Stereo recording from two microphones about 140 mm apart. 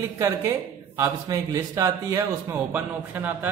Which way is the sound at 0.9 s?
20° right (ahead or behind).